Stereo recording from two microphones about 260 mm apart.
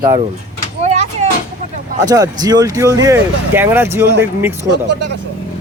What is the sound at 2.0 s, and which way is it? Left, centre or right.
Speech, centre.